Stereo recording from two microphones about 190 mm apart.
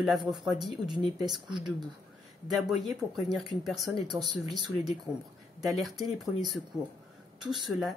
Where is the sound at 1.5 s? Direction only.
20° right (ahead or behind).